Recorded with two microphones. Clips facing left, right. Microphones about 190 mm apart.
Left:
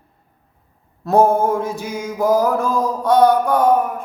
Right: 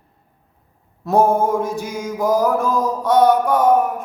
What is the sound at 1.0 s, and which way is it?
Music, centre (ahead or behind).